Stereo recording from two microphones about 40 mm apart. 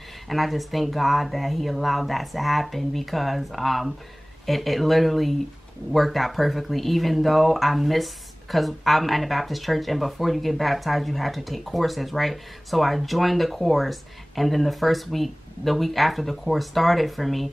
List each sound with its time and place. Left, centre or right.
0.3 s speech: centre